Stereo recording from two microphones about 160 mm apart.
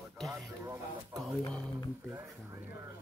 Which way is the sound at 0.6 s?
20° right (ahead or behind).